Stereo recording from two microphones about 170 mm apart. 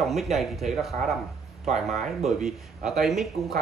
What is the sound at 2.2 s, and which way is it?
Speech, centre (ahead or behind).